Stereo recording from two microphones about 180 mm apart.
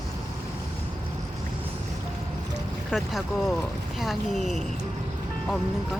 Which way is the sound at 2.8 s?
Centre (ahead or behind).